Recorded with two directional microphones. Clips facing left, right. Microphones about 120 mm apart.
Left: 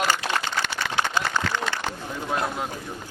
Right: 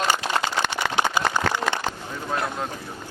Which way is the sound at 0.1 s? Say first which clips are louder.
Right 2 dB; 20° right (ahead or behind).